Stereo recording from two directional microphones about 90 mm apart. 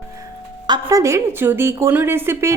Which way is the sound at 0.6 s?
50° right (ahead or behind).